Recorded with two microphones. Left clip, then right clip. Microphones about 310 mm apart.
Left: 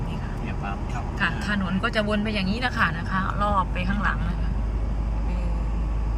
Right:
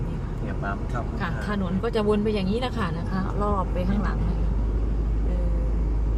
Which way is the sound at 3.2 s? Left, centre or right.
Left.